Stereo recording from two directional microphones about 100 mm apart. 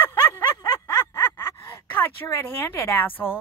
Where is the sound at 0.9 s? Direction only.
25° left (ahead or behind).